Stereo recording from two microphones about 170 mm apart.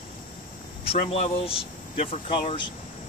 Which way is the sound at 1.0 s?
35° left (ahead or behind).